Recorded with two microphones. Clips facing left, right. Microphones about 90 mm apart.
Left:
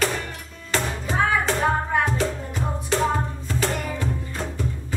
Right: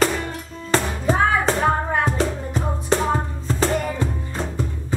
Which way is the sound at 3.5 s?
30° right (ahead or behind).